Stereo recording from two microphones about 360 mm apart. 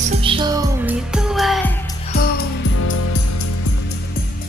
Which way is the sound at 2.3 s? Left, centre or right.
Left.